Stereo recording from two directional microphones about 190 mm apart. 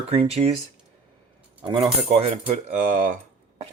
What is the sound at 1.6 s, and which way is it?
Speech, 25° right (ahead or behind).